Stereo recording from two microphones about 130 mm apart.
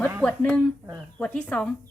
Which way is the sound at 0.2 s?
5° left (ahead or behind).